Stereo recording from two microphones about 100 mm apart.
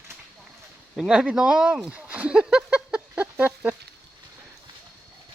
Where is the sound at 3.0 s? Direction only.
15° right (ahead or behind).